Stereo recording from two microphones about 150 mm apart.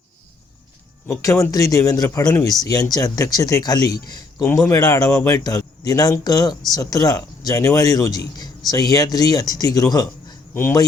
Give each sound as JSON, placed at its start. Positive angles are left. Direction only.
{"t": 1.0, "sound": "speech", "side_deg": 20}